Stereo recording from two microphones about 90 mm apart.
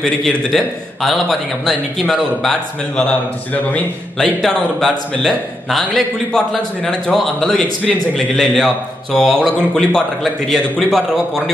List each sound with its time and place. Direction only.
0.0 s a man's voice: 5° left (ahead or behind)
3.0 s a man's voice: 15° left (ahead or behind)
4.4 s a man's voice: 5° left (ahead or behind)